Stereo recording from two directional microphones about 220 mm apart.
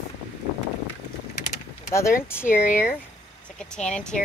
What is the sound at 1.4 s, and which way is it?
Vehicle, 35° left (ahead or behind).